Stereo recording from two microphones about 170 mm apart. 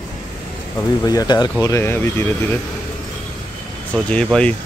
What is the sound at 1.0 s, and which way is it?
Speech, 20° left (ahead or behind).